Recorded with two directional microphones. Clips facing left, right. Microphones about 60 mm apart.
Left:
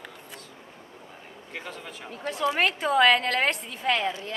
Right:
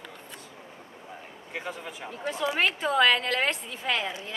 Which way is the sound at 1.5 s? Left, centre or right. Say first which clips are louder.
Right 2 dB; centre.